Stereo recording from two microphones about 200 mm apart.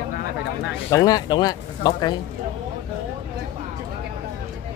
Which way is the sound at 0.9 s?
20° left (ahead or behind).